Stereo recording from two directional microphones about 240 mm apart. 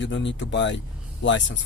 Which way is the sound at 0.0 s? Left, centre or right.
Left.